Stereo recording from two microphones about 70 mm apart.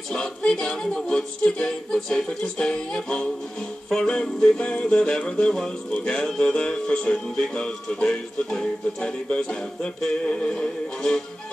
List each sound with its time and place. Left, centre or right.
0.1 s music: centre
5.9 s music: left